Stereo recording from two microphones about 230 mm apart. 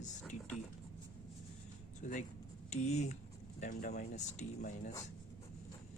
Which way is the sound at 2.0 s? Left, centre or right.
Left.